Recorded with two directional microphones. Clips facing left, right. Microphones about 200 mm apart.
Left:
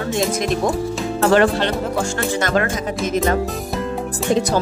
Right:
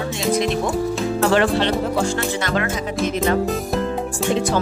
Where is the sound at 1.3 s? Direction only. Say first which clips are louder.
Left 4 dB; 45° left (ahead or behind).